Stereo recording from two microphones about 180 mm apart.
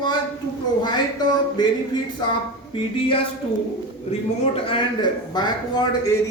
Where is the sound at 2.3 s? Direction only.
30° left (ahead or behind).